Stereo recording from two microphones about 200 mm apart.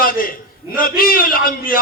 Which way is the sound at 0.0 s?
45° left (ahead or behind).